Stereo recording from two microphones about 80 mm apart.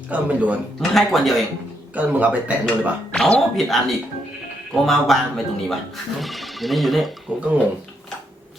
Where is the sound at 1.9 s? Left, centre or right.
Centre.